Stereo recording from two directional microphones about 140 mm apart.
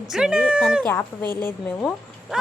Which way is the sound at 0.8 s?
10° left (ahead or behind).